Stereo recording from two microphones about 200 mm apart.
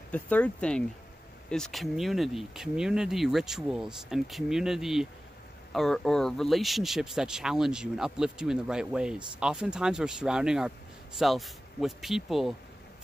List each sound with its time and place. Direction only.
0.1 s speech: 5° left (ahead or behind)